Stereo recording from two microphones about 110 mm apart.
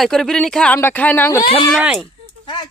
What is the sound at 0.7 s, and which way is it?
Speech, 20° left (ahead or behind).